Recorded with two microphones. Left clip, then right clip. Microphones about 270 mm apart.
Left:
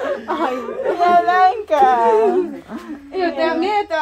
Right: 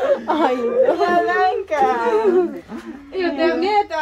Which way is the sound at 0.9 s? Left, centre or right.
Left.